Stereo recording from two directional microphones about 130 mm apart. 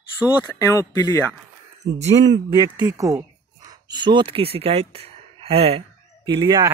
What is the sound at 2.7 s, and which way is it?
Speech, 25° right (ahead or behind).